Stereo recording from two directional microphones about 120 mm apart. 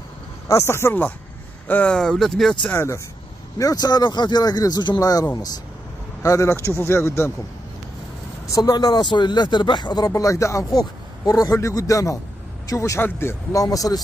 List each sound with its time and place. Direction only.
0.5 s speech: 20° left (ahead or behind); by 2.5 s centre (ahead or behind)
2.7 s speech: 20° left (ahead or behind)
3.5 s speech: 30° left (ahead or behind)
8.5 s speech: 30° left (ahead or behind)